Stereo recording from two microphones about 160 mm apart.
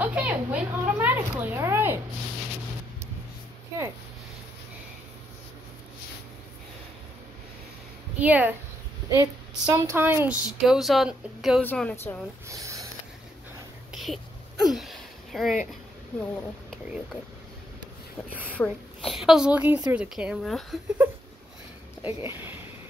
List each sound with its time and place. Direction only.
0.0 s a sound: 10° right (ahead or behind)
8.2 s a woman's voice: 10° right (ahead or behind)
9.1 s a woman's voice: 20° right (ahead or behind)
10.6 s a woman's voice: centre (ahead or behind)
11.6 s a woman's voice: 10° left (ahead or behind)
12.4 s speech: 20° right (ahead or behind)
13.9 s a sound: centre (ahead or behind)
16.7 s a woman's voice: centre (ahead or behind)
18.6 s a woman's voice: 5° left (ahead or behind)
22.0 s a woman's voice: 15° right (ahead or behind)